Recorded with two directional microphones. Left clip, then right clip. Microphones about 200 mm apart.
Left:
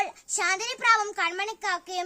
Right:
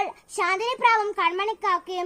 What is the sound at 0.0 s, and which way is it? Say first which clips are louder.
A child's voice: right 2 dB; 25° left (ahead or behind).